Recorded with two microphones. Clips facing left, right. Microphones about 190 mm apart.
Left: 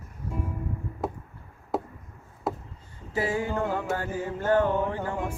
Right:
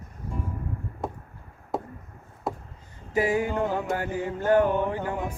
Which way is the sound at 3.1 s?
15° right (ahead or behind).